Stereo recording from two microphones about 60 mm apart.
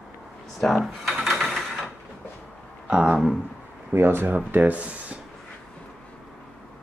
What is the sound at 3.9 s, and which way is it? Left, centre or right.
Speech, right.